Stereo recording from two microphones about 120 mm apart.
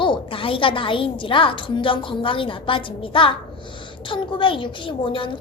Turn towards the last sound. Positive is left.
turn(degrees=45)  # may be behind; listen again after turning